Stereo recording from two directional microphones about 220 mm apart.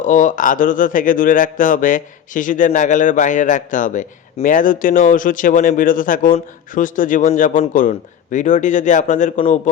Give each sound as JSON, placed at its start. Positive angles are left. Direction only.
{"t": 0.0, "sound": "speech", "side_deg": 35}